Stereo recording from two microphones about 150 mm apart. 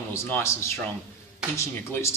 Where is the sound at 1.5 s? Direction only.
20° left (ahead or behind).